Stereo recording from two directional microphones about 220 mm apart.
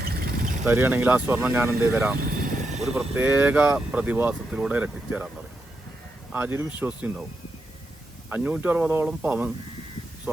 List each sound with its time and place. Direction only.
0.0 s vehicle: 45° right (ahead or behind)
0.6 s speech: 10° right (ahead or behind)
6.3 s speech: 10° right (ahead or behind)
8.3 s speech: 5° right (ahead or behind)